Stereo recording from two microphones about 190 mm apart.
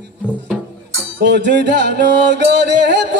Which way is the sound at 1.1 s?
65° right (ahead or behind).